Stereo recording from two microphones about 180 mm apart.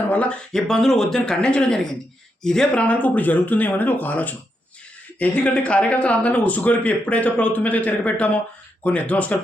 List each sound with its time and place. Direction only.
0.1 s speech: 5° left (ahead or behind)